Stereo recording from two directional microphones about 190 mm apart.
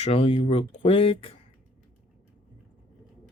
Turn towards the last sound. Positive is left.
turn(degrees=30)  # may be behind; listen again after turning